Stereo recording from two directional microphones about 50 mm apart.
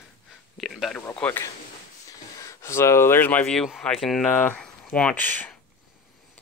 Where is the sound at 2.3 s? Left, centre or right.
Left.